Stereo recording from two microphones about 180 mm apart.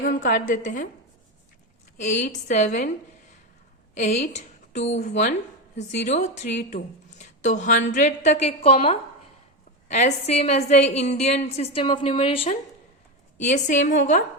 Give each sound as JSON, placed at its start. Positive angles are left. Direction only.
{"t": 0.0, "sound": "a woman's voice", "side_deg": 45}
{"t": 2.0, "sound": "speech", "side_deg": 40}
{"t": 3.9, "sound": "a woman's voice", "side_deg": 40}
{"t": 13.4, "sound": "a woman's voice", "side_deg": 40}